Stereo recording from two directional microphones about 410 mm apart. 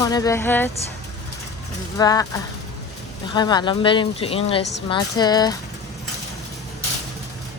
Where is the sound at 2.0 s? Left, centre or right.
Centre.